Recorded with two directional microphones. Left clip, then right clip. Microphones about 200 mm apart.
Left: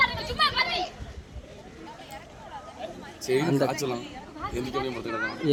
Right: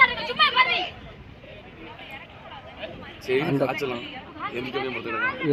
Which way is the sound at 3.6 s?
80° left.